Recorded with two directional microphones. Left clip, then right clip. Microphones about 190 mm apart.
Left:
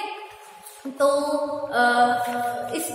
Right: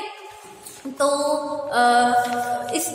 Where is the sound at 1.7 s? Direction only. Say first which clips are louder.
Right 2 dB; 30° right (ahead or behind).